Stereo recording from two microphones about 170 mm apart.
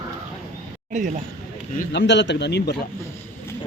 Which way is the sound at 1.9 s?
90° left.